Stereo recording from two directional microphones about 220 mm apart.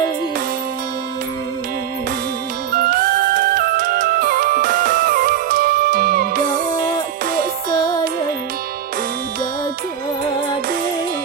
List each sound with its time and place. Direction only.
2.7 s music: 40° right (ahead or behind)